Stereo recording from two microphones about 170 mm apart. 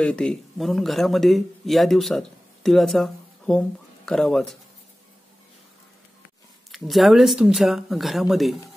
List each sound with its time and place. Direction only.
0.0 s speech: 5° left (ahead or behind)
6.7 s speech: centre (ahead or behind)